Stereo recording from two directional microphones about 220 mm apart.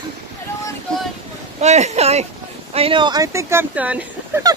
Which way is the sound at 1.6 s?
30° right (ahead or behind).